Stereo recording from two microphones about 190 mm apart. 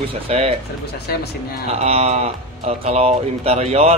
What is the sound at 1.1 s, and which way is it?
Speech, 55° left (ahead or behind).